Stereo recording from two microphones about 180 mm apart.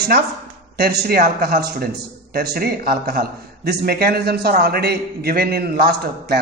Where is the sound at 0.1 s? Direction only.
55° right (ahead or behind).